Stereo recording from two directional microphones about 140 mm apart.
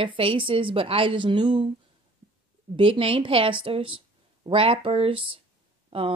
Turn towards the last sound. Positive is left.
turn(degrees=-40)  # may be behind; listen again after turning